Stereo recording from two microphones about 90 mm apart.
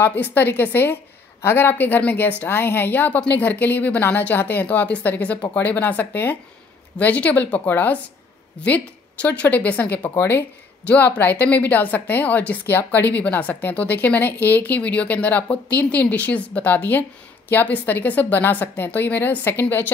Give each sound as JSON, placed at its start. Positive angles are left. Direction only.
{"t": 0.0, "sound": "a woman's voice", "side_deg": 20}